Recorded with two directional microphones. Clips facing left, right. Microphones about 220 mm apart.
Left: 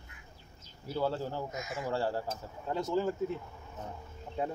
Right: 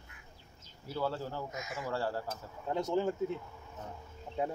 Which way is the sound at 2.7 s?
20° right (ahead or behind).